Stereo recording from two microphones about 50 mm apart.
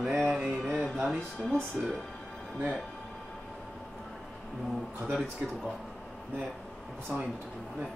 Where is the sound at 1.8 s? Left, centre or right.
Right.